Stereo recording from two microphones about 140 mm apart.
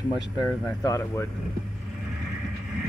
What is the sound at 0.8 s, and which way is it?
Speech, 25° left (ahead or behind).